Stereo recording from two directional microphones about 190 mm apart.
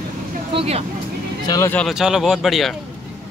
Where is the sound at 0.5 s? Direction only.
35° right (ahead or behind).